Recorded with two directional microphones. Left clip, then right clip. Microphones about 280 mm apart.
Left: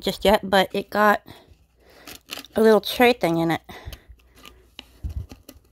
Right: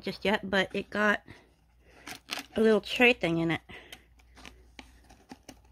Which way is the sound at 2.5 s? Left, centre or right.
Centre.